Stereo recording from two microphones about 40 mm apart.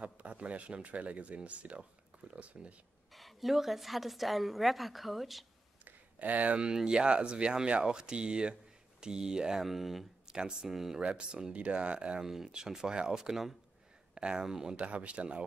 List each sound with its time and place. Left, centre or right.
0.0 s speech: right
3.1 s a woman's voice: centre
6.1 s speech: right
6.6 s speech: centre
9.6 s a woman's voice: centre
10.2 s speech: centre
11.0 s speech: right
12.3 s speech: centre
14.1 s speech: right
14.4 s speech: centre
14.8 s speech: right